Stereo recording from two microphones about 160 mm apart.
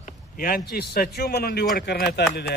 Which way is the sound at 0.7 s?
75° left (ahead or behind).